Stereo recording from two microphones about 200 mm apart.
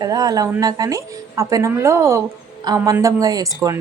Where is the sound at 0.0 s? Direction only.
20° right (ahead or behind).